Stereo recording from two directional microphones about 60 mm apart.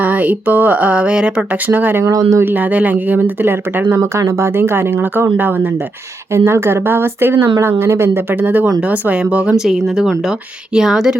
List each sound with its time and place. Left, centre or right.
0.0 s a sound: right
1.7 s speech: right
2.0 s speech: right
2.4 s a sound: right
3.4 s speech: right
4.0 s speech: right
6.3 s speech: right
8.8 s a sound: right
9.6 s speech: centre